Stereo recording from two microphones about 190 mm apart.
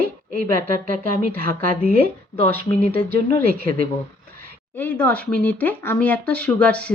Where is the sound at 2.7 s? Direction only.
30° left (ahead or behind).